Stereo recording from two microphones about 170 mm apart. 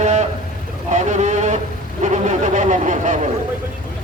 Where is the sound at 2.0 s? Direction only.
45° right (ahead or behind).